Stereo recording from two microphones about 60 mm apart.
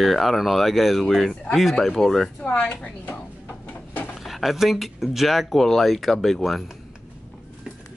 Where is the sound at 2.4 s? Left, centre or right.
Left.